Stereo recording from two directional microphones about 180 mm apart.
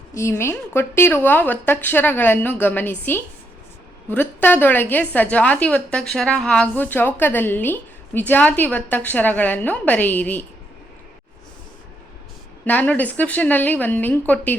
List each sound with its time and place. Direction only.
0.1 s a woman's voice: 15° left (ahead or behind)
12.6 s a woman's voice: 10° left (ahead or behind)